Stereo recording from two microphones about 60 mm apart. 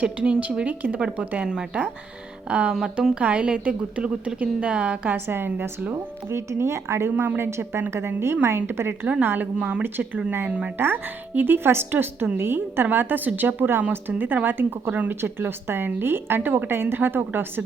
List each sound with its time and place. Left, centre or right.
0.0 s speech: centre
5.1 s a woman's voice: right
5.5 s speech: right
5.9 s a woman's voice: right
9.6 s speech: centre
10.8 s a woman's voice: right
15.2 s a woman's voice: right